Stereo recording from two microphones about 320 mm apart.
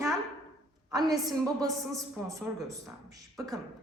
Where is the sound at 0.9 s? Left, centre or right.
Centre.